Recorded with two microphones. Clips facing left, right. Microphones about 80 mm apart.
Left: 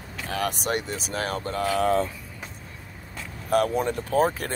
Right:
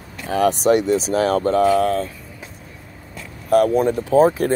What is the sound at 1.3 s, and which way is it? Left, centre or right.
Speech, right.